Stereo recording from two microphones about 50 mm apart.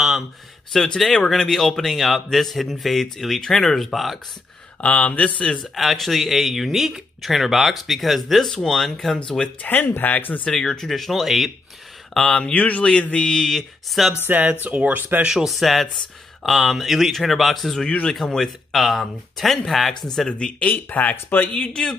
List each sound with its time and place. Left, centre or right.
0.8 s speech: centre
4.8 s speech: left
5.8 s speech: centre
9.6 s speech: left
10.4 s speech: centre
12.4 s speech: left
13.3 s speech: centre
14.2 s speech: right
15.0 s speech: right
15.4 s speech: centre
19.9 s speech: centre
20.7 s speech: left